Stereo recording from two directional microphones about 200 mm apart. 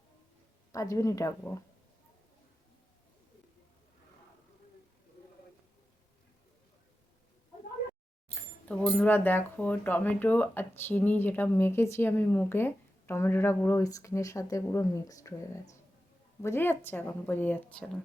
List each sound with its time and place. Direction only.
0.7 s speech: 15° left (ahead or behind)
8.4 s speech: 5° left (ahead or behind)
16.4 s speech: 10° left (ahead or behind)